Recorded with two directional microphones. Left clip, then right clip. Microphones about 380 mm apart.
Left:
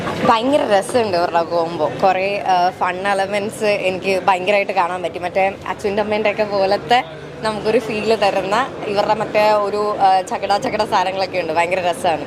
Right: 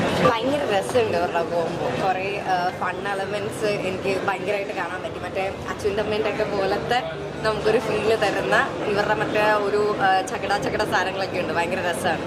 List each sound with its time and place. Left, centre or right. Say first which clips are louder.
0.3 s speech: left 7 dB; left
8.0 s speech: left 5 dB; left